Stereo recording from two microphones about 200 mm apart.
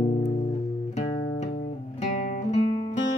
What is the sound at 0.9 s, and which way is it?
Music, 35° left (ahead or behind).